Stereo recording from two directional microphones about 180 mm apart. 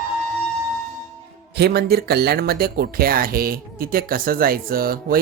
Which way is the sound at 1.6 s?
65° right (ahead or behind).